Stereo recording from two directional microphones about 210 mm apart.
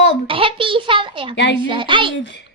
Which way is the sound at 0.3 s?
25° right (ahead or behind).